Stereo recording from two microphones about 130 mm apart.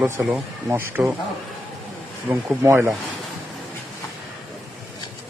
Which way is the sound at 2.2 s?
15° right (ahead or behind).